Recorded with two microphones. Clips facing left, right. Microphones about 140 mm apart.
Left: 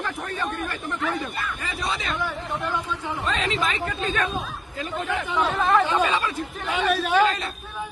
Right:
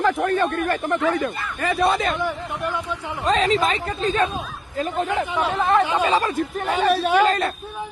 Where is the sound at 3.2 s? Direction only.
40° right (ahead or behind).